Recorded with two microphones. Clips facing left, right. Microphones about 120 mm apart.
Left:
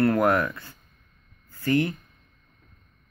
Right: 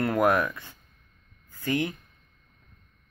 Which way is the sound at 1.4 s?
15° right (ahead or behind).